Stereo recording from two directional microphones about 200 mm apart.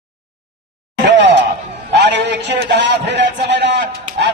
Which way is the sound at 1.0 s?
60° right (ahead or behind).